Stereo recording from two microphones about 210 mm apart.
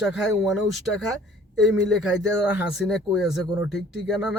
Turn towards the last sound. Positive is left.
turn(degrees=0)  # may be behind; listen again after turning